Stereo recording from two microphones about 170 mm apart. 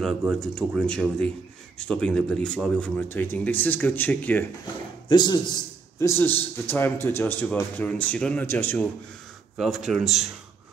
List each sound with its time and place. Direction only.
0.0 s speech: centre (ahead or behind)
5.0 s a man's voice: 25° left (ahead or behind)
9.6 s speech: centre (ahead or behind)